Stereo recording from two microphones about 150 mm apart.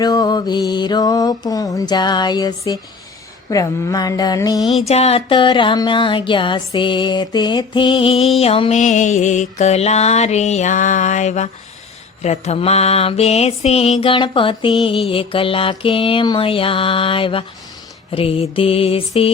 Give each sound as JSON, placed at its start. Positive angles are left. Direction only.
{"t": 0.0, "sound": "mantra", "side_deg": 25}
{"t": 4.9, "sound": "music", "side_deg": 45}
{"t": 8.7, "sound": "mantra", "side_deg": 55}
{"t": 14.0, "sound": "music", "side_deg": 35}